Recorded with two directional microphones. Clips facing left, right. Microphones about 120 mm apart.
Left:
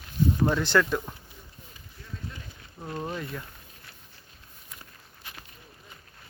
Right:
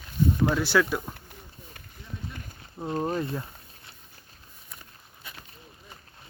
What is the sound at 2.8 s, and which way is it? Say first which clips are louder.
Speech: right 6 dB; 30° right (ahead or behind).